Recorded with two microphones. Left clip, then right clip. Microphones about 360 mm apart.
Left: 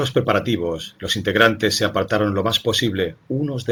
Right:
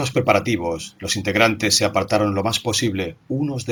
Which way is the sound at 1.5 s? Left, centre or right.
Right.